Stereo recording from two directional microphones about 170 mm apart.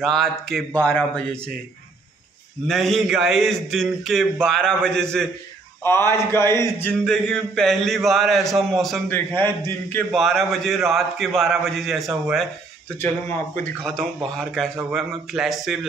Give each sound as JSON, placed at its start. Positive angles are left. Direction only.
{"t": 0.0, "sound": "a man's voice", "side_deg": 0}
{"t": 2.7, "sound": "a man's voice", "side_deg": 0}
{"t": 5.9, "sound": "a man's voice", "side_deg": 15}
{"t": 9.1, "sound": "a man's voice", "side_deg": 10}
{"t": 10.1, "sound": "a man's voice", "side_deg": 0}
{"t": 13.8, "sound": "a man's voice", "side_deg": 5}